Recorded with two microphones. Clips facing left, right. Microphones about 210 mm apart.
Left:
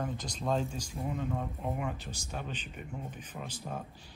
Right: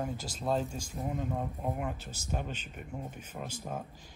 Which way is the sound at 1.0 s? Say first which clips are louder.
Right 1 dB; 35° right (ahead or behind).